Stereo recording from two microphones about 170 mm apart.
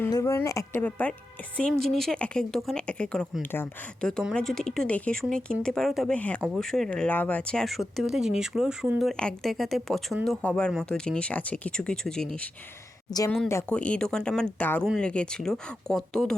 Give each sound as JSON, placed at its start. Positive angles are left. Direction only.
{"t": 0.0, "sound": "speech", "side_deg": 20}
{"t": 13.1, "sound": "speech", "side_deg": 20}